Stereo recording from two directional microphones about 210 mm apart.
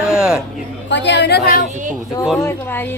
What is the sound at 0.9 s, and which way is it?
Speech, 55° left (ahead or behind).